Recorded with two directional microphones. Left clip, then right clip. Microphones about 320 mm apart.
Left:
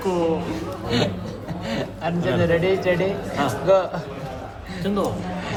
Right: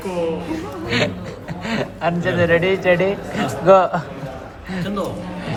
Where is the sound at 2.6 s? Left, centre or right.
Left.